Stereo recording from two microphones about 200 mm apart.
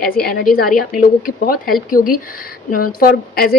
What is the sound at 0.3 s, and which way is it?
Speech, 45° left (ahead or behind).